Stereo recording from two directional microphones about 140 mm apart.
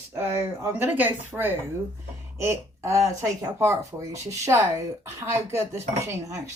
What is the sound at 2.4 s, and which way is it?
Speech, 20° right (ahead or behind).